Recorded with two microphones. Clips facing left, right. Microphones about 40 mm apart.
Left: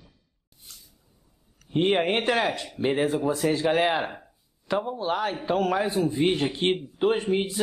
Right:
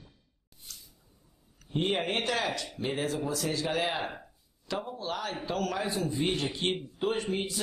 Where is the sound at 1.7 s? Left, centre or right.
Left.